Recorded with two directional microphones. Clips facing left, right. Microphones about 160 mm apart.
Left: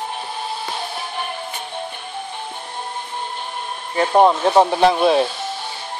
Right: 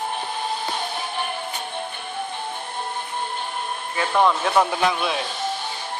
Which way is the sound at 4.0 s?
35° left (ahead or behind).